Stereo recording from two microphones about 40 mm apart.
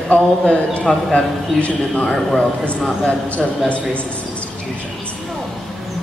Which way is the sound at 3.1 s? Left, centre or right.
Left.